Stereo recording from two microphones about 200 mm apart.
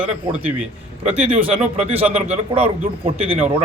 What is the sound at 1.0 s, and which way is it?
A man's voice, 5° right (ahead or behind).